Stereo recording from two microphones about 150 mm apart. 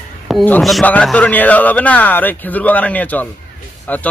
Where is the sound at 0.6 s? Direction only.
Centre (ahead or behind).